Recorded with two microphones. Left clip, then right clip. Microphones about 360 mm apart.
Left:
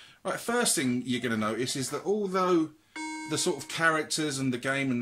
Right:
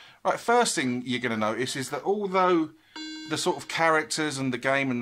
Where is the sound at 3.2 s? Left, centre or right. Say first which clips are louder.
Right 4 dB; centre.